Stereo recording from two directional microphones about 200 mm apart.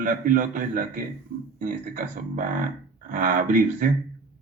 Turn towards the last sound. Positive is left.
turn(degrees=-40)  # may be behind; listen again after turning